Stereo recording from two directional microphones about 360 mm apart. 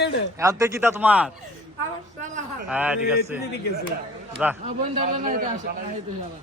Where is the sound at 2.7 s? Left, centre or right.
Centre.